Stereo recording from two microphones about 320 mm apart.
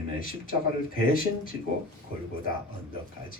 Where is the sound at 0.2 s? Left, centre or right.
Left.